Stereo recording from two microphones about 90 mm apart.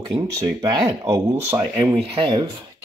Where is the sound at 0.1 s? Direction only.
40° right (ahead or behind).